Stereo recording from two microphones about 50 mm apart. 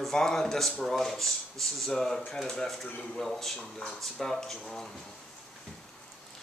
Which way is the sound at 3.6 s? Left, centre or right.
Centre.